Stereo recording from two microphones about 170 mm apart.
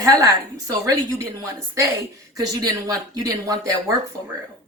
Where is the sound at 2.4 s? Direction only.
20° right (ahead or behind).